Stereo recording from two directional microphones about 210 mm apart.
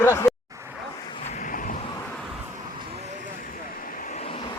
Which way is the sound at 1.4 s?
40° left (ahead or behind).